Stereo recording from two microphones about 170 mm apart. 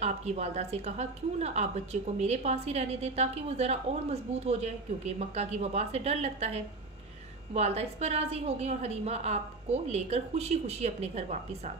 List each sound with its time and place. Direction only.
0.0 s a woman's voice: 40° right (ahead or behind)